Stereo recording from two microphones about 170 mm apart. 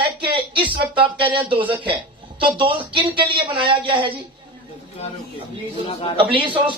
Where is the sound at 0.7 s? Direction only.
30° right (ahead or behind).